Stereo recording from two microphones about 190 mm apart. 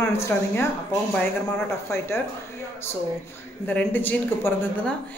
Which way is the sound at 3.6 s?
10° left (ahead or behind).